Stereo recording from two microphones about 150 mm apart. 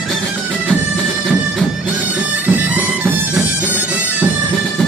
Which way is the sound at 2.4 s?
10° right (ahead or behind).